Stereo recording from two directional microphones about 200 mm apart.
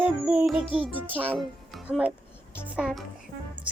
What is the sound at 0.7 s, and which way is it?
A child's voice, 5° right (ahead or behind).